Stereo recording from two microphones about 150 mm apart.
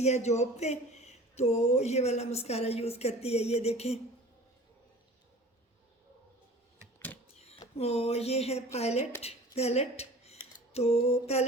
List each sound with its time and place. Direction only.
0.0 s speech: 50° left (ahead or behind)
7.3 s speech: 45° left (ahead or behind)